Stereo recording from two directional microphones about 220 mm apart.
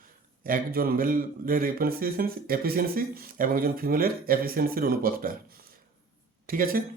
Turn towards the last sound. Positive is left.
turn(degrees=-40)  # may be behind; listen again after turning